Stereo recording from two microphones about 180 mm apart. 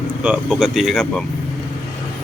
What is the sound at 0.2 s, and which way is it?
Speech, 5° right (ahead or behind).